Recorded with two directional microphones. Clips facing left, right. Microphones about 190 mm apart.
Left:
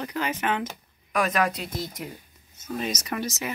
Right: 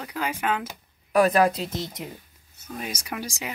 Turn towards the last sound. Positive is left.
turn(degrees=-10)  # may be behind; listen again after turning